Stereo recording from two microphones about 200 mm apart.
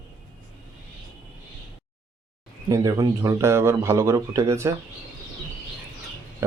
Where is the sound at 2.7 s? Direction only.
15° right (ahead or behind).